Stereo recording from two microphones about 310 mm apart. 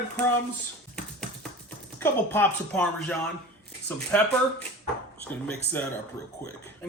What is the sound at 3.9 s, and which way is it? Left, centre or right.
Speech, centre.